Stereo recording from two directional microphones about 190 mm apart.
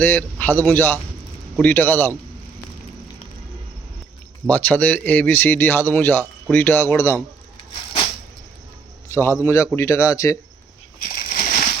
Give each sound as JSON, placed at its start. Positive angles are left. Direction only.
{"t": 0.0, "sound": "a man's voice", "side_deg": 10}
{"t": 4.4, "sound": "speech", "side_deg": 10}
{"t": 9.4, "sound": "speech", "side_deg": 15}
{"t": 11.0, "sound": "a sound", "side_deg": 50}